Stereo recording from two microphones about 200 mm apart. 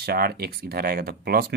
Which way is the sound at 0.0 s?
50° right (ahead or behind).